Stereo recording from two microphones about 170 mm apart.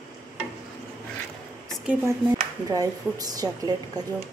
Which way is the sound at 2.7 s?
20° right (ahead or behind).